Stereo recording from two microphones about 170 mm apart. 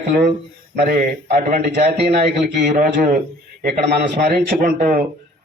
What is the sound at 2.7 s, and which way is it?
Speech, 50° right (ahead or behind).